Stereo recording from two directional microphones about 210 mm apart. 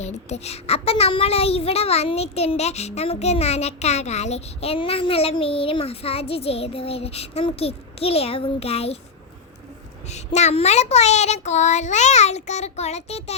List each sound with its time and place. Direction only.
0.0 s a child's voice: 30° left (ahead or behind)
10.1 s speech: 30° left (ahead or behind)